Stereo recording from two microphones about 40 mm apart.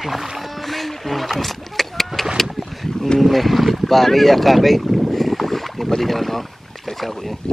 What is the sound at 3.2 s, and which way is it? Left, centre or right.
Speech, centre.